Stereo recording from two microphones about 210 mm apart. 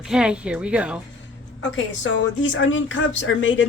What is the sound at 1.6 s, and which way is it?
Speech, 60° left (ahead or behind).